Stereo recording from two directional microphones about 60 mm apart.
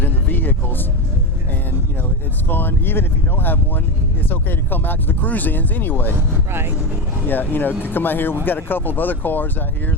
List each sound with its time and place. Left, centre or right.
0.0 s a sound: left
2.5 s speech: left
6.5 s speech: right
7.3 s speech: left